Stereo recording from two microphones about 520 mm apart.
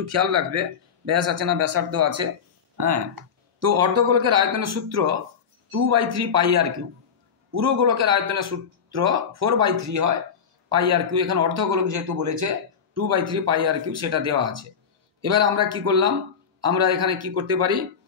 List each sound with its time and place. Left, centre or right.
0.0 s a man's voice: right